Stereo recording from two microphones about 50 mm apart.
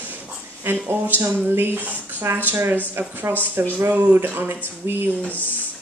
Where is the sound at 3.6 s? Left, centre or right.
Right.